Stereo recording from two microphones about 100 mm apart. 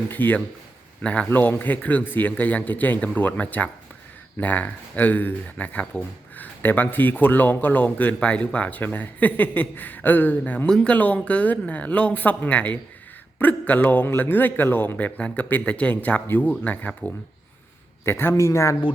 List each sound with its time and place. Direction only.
0.1 s speech: 20° left (ahead or behind)